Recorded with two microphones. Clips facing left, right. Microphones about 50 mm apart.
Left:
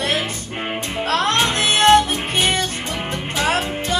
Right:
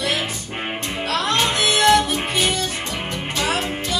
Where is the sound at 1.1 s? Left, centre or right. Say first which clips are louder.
Left 2 dB; left.